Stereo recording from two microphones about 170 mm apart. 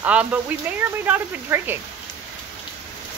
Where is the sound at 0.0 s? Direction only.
10° right (ahead or behind).